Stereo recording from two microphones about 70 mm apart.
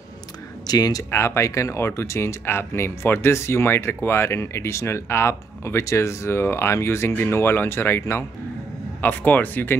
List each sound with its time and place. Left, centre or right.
0.7 s speech: left
1.1 s speech: left
9.0 s speech: left